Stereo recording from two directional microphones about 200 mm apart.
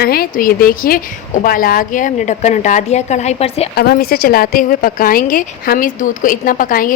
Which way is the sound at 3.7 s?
50° left (ahead or behind).